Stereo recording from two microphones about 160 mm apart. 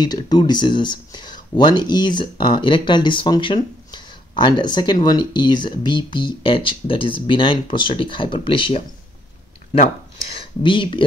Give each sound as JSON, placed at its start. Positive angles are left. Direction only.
{"t": 0.0, "sound": "speech", "side_deg": 25}
{"t": 10.2, "sound": "speech", "side_deg": 35}